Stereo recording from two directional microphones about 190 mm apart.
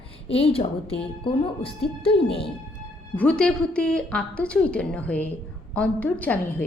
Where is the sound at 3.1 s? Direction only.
5° left (ahead or behind).